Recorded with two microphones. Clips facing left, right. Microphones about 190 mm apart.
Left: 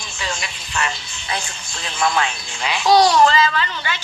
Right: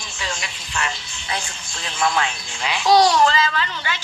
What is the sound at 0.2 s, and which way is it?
Speech, 70° left (ahead or behind).